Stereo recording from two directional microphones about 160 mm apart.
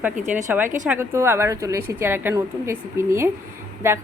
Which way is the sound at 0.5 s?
10° right (ahead or behind).